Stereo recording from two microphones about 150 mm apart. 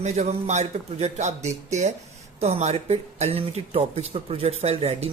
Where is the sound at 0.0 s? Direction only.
45° right (ahead or behind).